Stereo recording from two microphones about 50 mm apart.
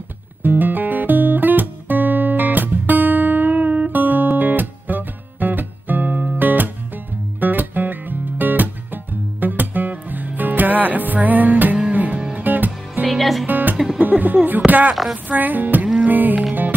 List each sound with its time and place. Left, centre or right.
0.4 s music: right
13.0 s music: centre
13.5 s music: right
14.7 s a sound: right
15.2 s speech: right
16.1 s music: right